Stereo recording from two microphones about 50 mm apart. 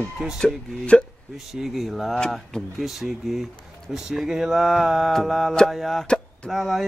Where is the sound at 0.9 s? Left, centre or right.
Left.